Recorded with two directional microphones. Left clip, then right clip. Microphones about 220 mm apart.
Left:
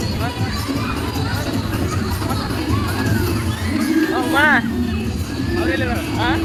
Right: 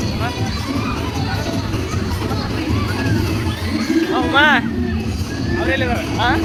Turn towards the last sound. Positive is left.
turn(degrees=-5)  # may be behind; listen again after turning